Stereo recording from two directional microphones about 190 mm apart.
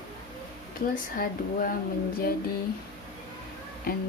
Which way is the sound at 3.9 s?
50° left (ahead or behind).